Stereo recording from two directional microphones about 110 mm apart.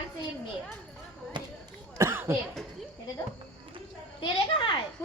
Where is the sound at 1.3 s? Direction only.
45° right (ahead or behind).